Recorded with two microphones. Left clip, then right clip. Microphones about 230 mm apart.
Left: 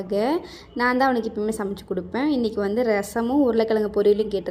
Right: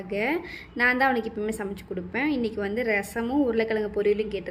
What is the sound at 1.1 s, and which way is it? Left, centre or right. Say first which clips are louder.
Speech: left 3 dB; centre.